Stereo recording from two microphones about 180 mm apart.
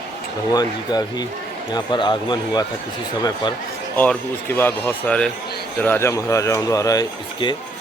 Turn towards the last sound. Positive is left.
turn(degrees=25)  # may be behind; listen again after turning